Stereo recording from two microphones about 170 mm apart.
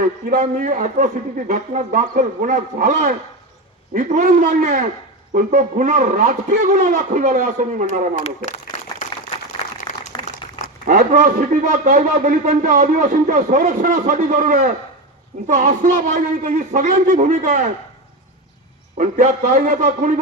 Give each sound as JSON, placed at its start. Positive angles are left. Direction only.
{"t": 0.3, "sound": "a man's voice", "side_deg": -50}
{"t": 8.1, "sound": "speech", "side_deg": 45}
{"t": 10.8, "sound": "a man's voice", "side_deg": -50}
{"t": 18.9, "sound": "a man's voice", "side_deg": -50}